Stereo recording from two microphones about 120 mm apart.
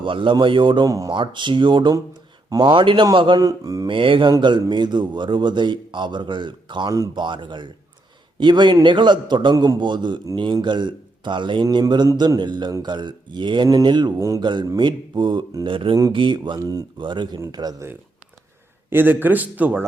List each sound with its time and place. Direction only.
0.0 s a man's voice: 45° right (ahead or behind)
0.9 s speech: 30° right (ahead or behind)
1.1 s a man's voice: 40° right (ahead or behind)
3.8 s a man's voice: 45° right (ahead or behind)
14.2 s speech: 25° right (ahead or behind)
14.4 s a man's voice: 40° right (ahead or behind)
18.9 s a man's voice: 15° right (ahead or behind)